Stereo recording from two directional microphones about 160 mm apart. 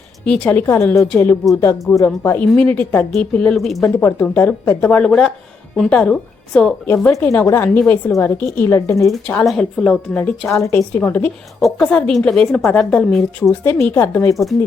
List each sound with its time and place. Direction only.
0.3 s a woman's voice: 10° left (ahead or behind)
3.8 s a woman's voice: 15° left (ahead or behind)
6.9 s speech: 15° left (ahead or behind)
9.0 s a woman's voice: 5° left (ahead or behind)
10.5 s a woman's voice: 20° left (ahead or behind); by 13.5 s centre (ahead or behind)
13.5 s speech: 15° left (ahead or behind)